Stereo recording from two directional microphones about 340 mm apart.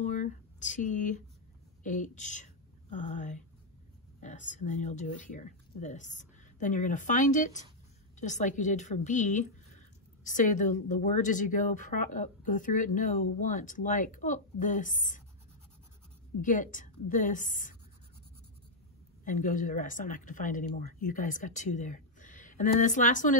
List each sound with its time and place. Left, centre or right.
0.0 s a sound: left
1.8 s speech: left
16.3 s speech: left
19.2 s speech: left